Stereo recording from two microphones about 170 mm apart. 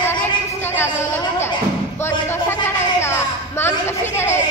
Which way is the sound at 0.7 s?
15° left (ahead or behind).